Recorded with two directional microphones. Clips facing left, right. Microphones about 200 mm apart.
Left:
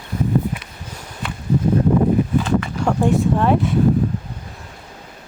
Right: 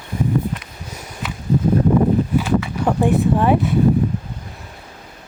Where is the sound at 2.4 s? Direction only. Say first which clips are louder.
Even; 5° right (ahead or behind).